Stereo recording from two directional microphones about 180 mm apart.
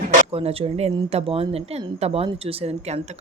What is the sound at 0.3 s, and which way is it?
Speech, 35° right (ahead or behind).